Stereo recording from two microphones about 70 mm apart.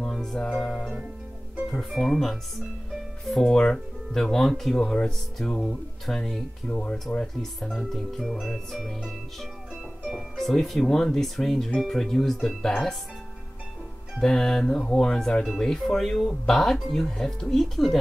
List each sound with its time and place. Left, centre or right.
0.0 s music: centre
1.7 s speech: centre
6.7 s speech: centre
14.2 s speech: centre